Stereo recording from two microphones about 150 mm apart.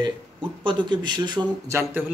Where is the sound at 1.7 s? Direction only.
15° right (ahead or behind).